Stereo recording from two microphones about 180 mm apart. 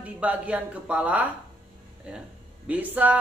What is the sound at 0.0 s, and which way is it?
A woman's voice, 5° right (ahead or behind).